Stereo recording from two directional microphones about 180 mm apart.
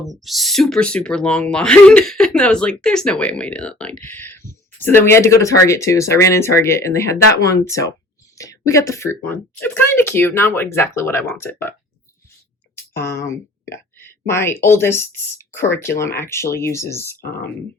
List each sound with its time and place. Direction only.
0.0 s speech: centre (ahead or behind)
12.9 s speech: 15° left (ahead or behind)
17.2 s speech: 60° left (ahead or behind)